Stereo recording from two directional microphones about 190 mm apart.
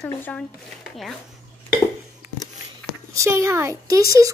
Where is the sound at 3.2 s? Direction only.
15° right (ahead or behind).